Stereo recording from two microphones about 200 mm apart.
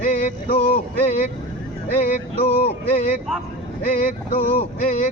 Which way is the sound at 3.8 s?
45° left (ahead or behind).